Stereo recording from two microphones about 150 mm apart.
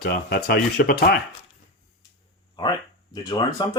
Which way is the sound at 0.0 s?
90° left.